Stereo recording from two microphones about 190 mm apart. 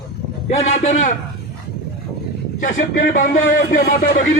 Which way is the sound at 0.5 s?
35° left (ahead or behind).